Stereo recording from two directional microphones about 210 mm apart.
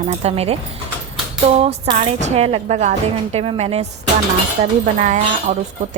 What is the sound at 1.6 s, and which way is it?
A woman's voice, 25° right (ahead or behind).